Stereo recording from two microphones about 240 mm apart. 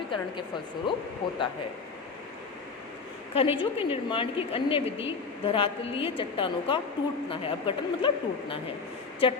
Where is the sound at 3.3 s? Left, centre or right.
Left.